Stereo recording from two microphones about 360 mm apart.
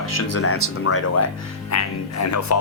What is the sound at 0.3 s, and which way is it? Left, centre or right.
Speech, left.